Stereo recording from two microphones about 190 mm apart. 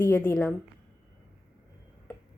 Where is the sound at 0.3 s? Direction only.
5° left (ahead or behind).